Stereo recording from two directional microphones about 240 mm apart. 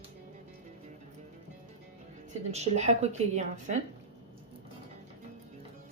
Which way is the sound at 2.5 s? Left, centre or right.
Right.